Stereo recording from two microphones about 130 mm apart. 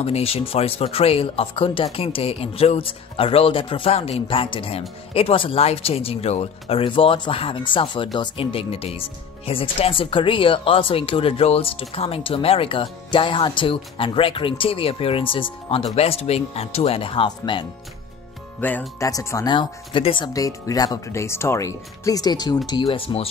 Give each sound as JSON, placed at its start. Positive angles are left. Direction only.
{"t": 0.0, "sound": "speech", "side_deg": 50}
{"t": 18.6, "sound": "speech", "side_deg": 15}
{"t": 19.0, "sound": "speech", "side_deg": 25}
{"t": 20.3, "sound": "speech", "side_deg": 25}
{"t": 22.8, "sound": "speech", "side_deg": 45}